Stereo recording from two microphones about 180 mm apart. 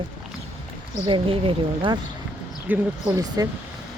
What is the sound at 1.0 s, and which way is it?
Speech, 30° right (ahead or behind).